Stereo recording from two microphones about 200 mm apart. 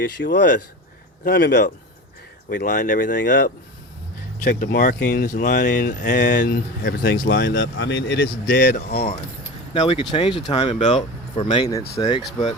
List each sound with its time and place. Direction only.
0.0 s speech: 55° left (ahead or behind)
2.5 s speech: 40° left (ahead or behind); by 8.3 s 60° left (ahead or behind)
8.5 s speech: 50° left (ahead or behind)
9.7 s speech: 30° left (ahead or behind)